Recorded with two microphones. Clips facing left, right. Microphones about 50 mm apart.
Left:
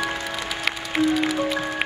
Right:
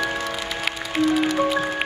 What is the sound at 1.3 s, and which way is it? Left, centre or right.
Music, centre.